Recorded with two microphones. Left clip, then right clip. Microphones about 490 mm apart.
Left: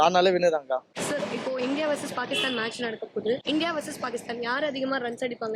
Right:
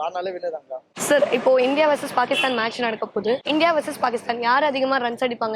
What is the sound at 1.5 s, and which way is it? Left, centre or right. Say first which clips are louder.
A woman's voice: right 10 dB; centre.